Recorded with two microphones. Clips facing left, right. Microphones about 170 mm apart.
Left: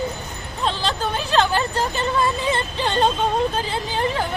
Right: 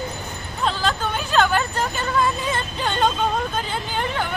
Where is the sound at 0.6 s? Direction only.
30° left (ahead or behind).